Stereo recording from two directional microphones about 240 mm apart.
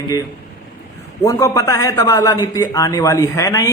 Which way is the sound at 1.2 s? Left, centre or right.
Centre.